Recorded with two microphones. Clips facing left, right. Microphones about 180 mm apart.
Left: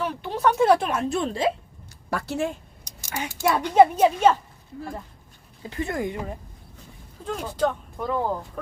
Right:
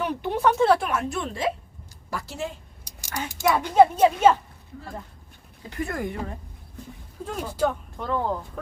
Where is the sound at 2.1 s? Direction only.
65° left (ahead or behind).